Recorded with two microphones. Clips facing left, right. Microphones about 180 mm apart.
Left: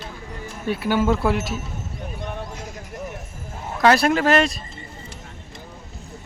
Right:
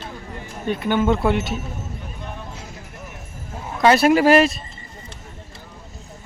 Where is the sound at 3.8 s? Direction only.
5° right (ahead or behind).